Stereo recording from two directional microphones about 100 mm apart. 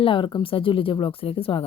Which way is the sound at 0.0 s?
55° left (ahead or behind).